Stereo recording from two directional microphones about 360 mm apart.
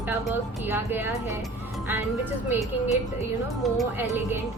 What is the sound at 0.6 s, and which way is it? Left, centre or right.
Speech, centre.